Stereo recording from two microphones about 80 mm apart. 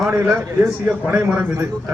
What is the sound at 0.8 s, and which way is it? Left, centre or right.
Speech, right.